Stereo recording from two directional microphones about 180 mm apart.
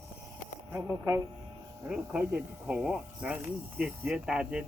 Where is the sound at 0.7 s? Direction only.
15° right (ahead or behind).